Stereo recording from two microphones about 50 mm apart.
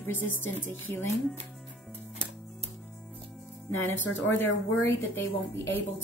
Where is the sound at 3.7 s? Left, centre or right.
Left.